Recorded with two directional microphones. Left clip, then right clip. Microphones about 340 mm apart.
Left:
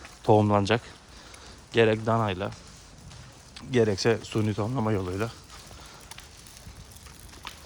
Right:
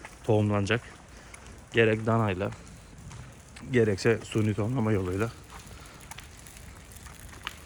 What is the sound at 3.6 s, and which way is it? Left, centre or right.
Speech, centre.